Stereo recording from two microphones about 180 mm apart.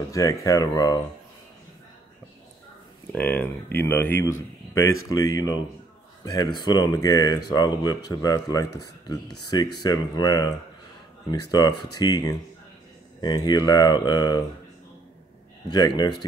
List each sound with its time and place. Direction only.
0.1 s speech: 20° left (ahead or behind)
3.1 s speech: 10° left (ahead or behind)
15.7 s speech: 20° left (ahead or behind)